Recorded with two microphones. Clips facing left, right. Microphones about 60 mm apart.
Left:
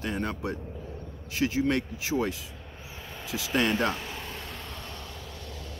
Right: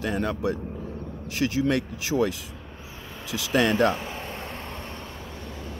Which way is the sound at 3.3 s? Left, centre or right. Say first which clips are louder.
Right 4 dB; right.